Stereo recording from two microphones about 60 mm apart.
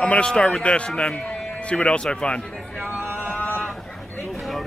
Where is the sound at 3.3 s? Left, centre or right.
Left.